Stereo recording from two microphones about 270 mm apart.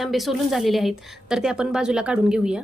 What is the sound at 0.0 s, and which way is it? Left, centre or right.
A woman's voice, centre.